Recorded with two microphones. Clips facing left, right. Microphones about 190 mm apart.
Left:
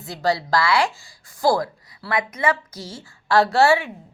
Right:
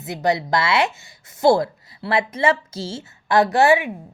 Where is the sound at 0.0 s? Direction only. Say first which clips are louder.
Right 2 dB; 20° right (ahead or behind).